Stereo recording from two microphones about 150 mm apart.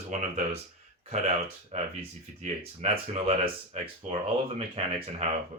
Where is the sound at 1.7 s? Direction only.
45° right (ahead or behind).